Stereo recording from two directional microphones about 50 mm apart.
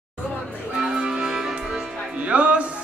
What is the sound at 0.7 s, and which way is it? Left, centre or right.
Music, centre.